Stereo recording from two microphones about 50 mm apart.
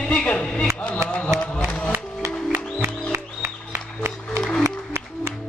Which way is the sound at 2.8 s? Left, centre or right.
Right.